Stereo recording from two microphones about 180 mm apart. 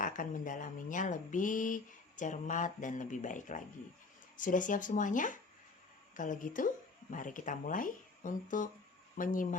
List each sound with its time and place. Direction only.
0.0 s speech: 50° left (ahead or behind)